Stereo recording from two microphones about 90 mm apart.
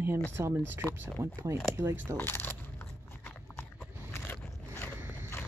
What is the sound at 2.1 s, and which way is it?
Speech, 25° left (ahead or behind).